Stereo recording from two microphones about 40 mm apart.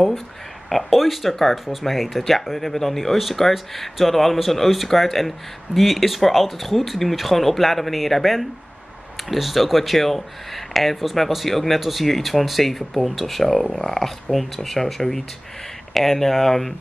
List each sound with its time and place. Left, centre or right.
0.7 s speech: centre